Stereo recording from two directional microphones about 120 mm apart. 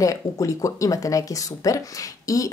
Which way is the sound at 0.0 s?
30° left (ahead or behind).